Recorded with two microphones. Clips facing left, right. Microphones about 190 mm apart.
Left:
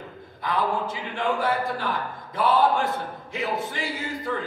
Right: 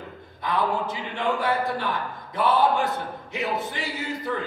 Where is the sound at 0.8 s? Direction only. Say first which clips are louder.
Even; 20° right (ahead or behind).